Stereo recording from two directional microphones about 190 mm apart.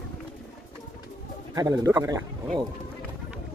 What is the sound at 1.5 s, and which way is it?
Speech, 20° right (ahead or behind).